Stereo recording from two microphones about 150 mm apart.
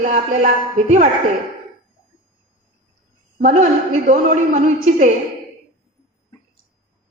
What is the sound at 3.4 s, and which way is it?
Speech, 50° right (ahead or behind).